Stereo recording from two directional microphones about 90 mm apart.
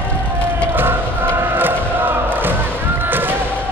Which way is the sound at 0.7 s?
25° right (ahead or behind).